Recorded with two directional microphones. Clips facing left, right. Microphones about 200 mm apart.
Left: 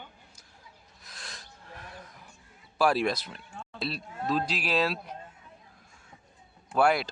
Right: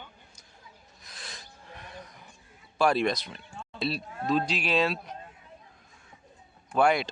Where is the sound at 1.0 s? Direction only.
Centre (ahead or behind).